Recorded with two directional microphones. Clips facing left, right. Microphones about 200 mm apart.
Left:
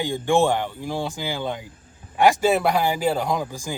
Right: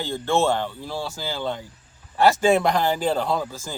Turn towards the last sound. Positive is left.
turn(degrees=15)  # may be behind; listen again after turning